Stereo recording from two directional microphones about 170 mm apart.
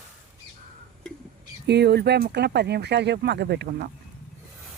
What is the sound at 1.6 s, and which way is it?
Speech, 75° right (ahead or behind).